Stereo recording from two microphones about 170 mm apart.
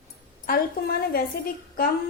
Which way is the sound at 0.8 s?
60° left (ahead or behind).